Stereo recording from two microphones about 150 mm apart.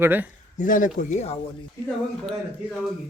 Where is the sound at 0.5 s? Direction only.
60° left (ahead or behind).